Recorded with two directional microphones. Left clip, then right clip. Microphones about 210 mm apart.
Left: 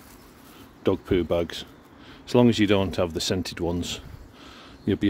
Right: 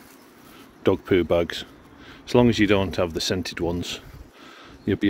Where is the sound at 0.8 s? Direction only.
Centre (ahead or behind).